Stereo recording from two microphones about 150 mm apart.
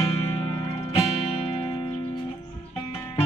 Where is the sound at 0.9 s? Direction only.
40° left (ahead or behind).